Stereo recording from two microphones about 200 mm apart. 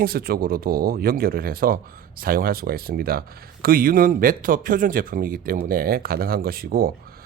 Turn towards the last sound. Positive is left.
turn(degrees=-50)  # may be behind; listen again after turning